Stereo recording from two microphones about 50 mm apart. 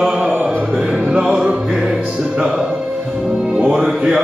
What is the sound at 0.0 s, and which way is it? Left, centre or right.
Mantra, centre.